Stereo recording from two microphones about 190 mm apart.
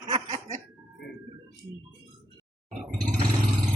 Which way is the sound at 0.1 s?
35° right (ahead or behind).